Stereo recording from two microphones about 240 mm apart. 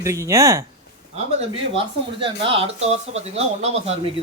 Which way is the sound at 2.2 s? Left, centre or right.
Right.